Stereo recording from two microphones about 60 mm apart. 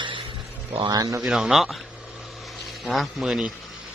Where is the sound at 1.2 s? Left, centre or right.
Centre.